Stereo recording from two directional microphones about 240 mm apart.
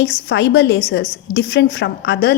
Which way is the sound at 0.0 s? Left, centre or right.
Left.